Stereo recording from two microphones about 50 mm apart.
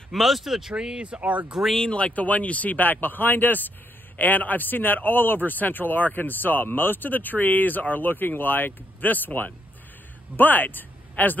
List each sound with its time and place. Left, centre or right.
0.1 s speech: centre
0.7 s speech: centre
1.6 s speech: centre
1.9 s speech: left